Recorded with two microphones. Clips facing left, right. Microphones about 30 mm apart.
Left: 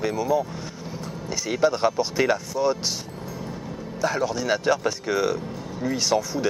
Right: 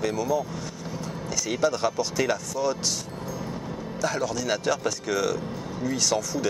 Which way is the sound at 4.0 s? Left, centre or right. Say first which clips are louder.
Left 3 dB; centre.